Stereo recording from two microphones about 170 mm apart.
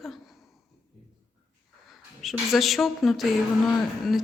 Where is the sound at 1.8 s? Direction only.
Centre (ahead or behind).